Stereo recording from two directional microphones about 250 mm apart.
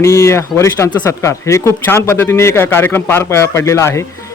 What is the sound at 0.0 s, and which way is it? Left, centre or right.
Speech, centre.